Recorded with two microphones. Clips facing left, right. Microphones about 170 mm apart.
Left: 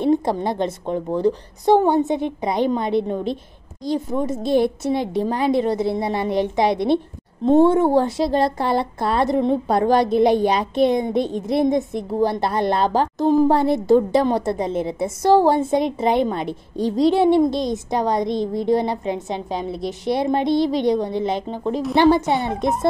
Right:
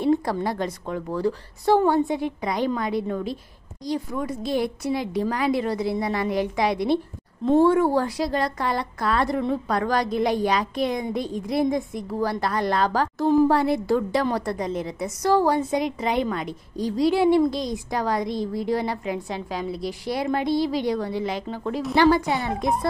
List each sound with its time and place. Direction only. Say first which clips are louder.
0.0 s a woman's voice: left 3 dB; 25° left (ahead or behind)
22.2 s speech: left 4 dB; centre (ahead or behind)